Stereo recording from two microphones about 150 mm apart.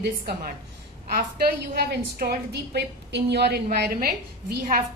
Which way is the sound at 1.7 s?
90° right.